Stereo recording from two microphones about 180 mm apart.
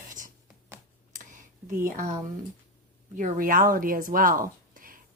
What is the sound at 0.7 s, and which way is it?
Computer keyboard, 15° right (ahead or behind).